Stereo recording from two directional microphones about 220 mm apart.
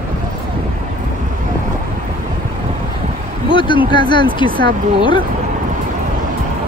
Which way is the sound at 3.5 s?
20° left (ahead or behind).